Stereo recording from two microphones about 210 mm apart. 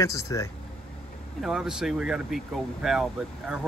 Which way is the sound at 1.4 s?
Centre (ahead or behind).